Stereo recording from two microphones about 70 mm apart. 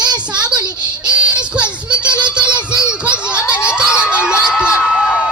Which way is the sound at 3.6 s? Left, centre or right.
Centre.